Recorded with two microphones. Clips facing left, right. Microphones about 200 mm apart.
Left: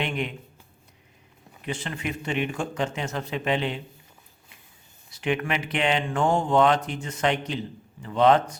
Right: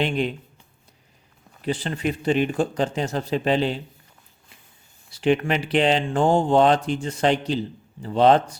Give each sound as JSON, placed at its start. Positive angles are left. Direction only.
{"t": 0.0, "sound": "speech", "side_deg": -30}
{"t": 1.6, "sound": "speech", "side_deg": -35}
{"t": 5.1, "sound": "speech", "side_deg": -30}